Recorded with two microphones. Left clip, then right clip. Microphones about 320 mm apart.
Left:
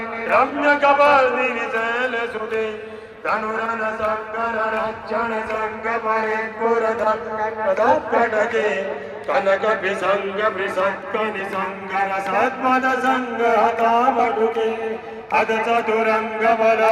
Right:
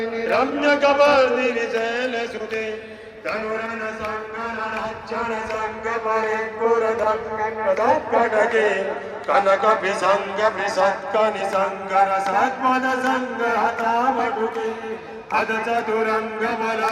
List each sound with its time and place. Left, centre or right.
0.3 s a man's voice: centre
3.2 s a sound: centre
4.8 s a man's voice: centre
6.7 s a man's voice: right
7.9 s a man's voice: right
12.3 s a sound: centre